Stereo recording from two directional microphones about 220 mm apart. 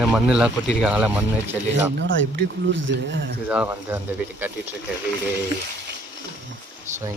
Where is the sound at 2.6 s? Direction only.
55° right (ahead or behind).